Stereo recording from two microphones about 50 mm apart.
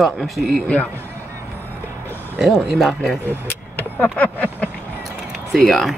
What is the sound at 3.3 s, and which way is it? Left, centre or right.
Vehicle, left.